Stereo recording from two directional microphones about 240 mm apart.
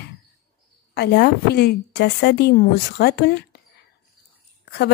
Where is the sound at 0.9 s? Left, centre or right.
Left.